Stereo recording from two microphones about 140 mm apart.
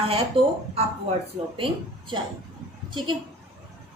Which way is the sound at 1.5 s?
40° right (ahead or behind).